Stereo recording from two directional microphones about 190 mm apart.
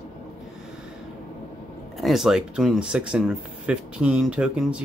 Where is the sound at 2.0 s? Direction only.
Centre (ahead or behind).